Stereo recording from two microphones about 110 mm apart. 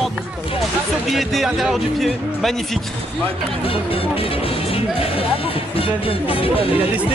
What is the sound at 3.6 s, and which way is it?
Speech, 55° left (ahead or behind).